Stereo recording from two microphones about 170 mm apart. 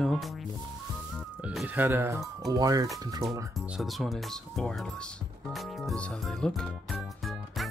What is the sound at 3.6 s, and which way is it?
Speech, centre (ahead or behind).